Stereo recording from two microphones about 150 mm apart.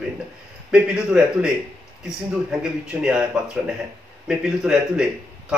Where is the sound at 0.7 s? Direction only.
5° right (ahead or behind).